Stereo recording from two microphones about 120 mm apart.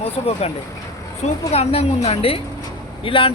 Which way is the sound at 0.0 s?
60° left (ahead or behind).